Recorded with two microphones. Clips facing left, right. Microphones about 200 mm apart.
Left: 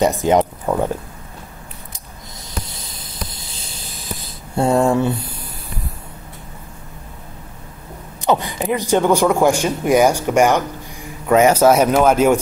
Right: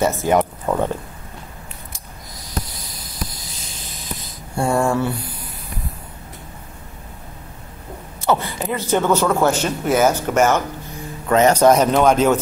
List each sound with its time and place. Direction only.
0.0 s a man's voice: 15° left (ahead or behind)
2.6 s a sound: 25° left (ahead or behind)
8.2 s a man's voice: 15° left (ahead or behind)